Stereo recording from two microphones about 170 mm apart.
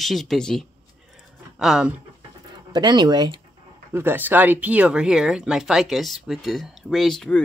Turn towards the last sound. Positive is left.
turn(degrees=5)  # may be behind; listen again after turning